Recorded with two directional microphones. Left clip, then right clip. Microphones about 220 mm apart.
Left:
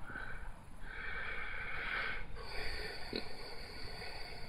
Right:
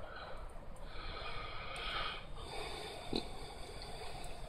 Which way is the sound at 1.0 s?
Centre (ahead or behind).